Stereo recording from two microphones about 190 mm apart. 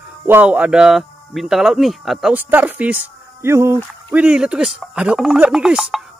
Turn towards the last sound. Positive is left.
turn(degrees=0)  # may be behind; listen again after turning